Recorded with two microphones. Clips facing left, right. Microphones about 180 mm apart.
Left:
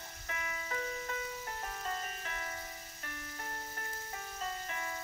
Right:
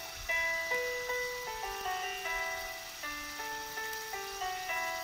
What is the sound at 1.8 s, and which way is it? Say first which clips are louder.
Ice cream truck: right 3 dB; 10° right (ahead or behind).